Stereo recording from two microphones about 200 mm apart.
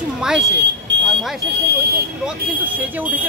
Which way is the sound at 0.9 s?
60° right (ahead or behind).